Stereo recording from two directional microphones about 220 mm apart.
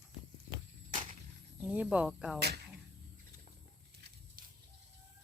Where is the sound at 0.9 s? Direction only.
35° right (ahead or behind).